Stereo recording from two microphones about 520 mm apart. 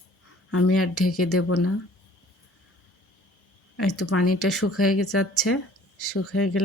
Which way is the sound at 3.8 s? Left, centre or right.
Left.